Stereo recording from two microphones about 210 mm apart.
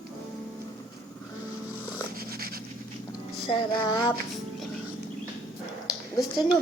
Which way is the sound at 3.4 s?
25° left (ahead or behind).